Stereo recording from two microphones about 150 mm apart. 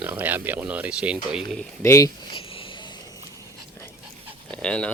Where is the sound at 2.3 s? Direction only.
35° left (ahead or behind).